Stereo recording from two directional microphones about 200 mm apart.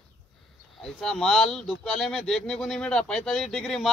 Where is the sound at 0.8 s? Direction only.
Centre (ahead or behind).